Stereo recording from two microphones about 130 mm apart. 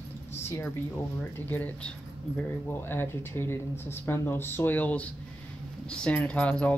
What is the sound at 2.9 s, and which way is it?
Speech, 15° left (ahead or behind).